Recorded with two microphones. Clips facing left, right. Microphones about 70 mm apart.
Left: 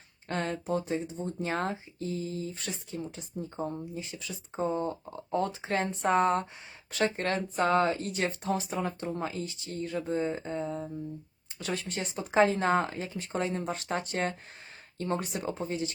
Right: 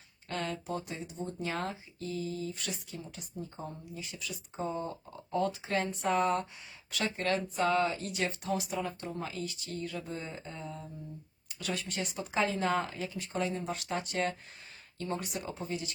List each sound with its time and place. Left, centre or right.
0.3 s speech: left
11.6 s speech: left
15.3 s speech: left